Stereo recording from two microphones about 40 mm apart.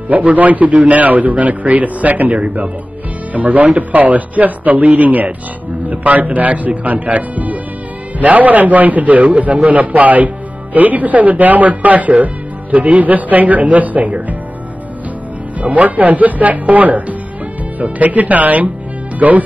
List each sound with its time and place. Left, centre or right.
0.1 s a man's voice: right
15.6 s a man's voice: right